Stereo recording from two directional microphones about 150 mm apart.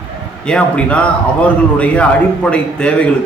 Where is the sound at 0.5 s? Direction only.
10° left (ahead or behind).